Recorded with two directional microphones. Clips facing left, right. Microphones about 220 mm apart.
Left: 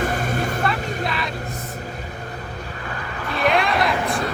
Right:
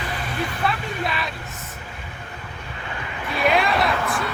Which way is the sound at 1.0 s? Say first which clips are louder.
Left 1 dB; centre (ahead or behind).